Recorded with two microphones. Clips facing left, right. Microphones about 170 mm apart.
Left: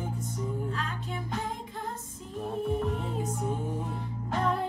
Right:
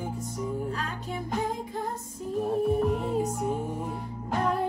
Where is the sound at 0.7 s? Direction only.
40° right (ahead or behind).